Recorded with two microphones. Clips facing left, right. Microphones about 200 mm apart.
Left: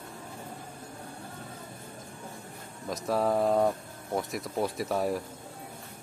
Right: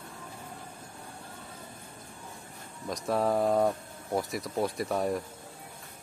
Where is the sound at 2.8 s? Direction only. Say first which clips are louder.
Even; centre (ahead or behind).